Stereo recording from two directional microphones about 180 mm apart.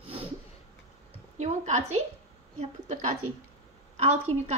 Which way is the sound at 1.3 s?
40° right (ahead or behind).